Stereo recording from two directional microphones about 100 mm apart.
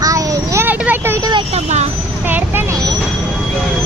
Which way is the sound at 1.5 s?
90° right.